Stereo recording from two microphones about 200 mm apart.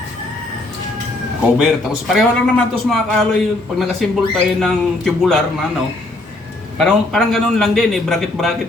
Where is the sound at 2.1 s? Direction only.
Centre (ahead or behind).